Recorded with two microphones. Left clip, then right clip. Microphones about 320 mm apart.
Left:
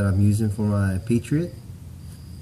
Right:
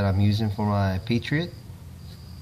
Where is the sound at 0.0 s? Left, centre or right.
Centre.